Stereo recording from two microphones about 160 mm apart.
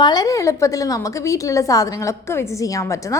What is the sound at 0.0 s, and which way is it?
A woman's voice, 25° left (ahead or behind).